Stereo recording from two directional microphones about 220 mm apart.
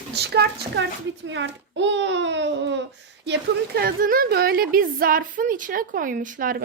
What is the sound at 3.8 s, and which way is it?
A woman's voice, 40° right (ahead or behind).